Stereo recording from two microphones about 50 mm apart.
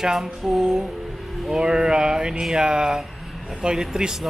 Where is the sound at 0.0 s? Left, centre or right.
Centre.